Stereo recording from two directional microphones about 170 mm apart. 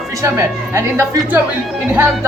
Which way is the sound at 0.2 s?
15° right (ahead or behind).